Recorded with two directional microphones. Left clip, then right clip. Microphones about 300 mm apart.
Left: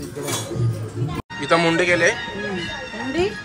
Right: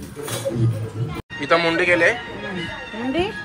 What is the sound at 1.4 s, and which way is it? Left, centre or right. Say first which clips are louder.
Speech: even; centre.